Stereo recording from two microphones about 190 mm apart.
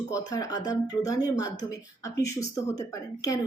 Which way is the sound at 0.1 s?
20° left (ahead or behind).